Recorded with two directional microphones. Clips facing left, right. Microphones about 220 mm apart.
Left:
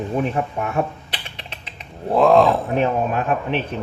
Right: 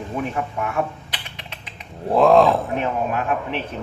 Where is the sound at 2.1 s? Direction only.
Centre (ahead or behind).